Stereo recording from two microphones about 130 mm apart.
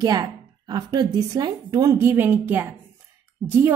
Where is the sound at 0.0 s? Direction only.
30° right (ahead or behind).